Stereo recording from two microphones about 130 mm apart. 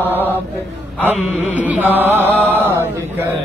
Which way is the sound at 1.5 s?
10° right (ahead or behind).